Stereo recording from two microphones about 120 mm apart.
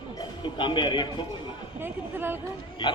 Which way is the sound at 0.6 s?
40° left (ahead or behind).